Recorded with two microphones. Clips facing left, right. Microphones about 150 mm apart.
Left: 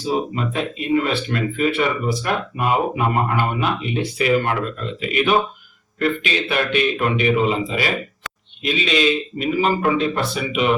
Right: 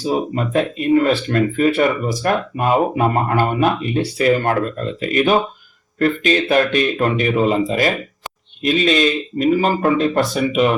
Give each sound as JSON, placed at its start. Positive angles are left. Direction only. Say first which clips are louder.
{"t": 0.3, "sound": "speech", "louder": "right 5 dB", "side_deg": -45}